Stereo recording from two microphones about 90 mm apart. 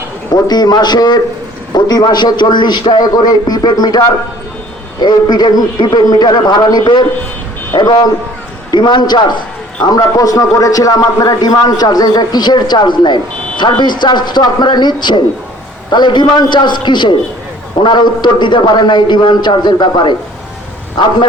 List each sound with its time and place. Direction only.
0.4 s a man's voice: 45° left (ahead or behind)
9.8 s a man's voice: 45° left (ahead or behind); by 21.1 s 60° left (ahead or behind)